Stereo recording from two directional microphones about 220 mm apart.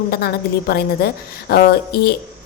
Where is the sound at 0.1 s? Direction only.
45° left (ahead or behind).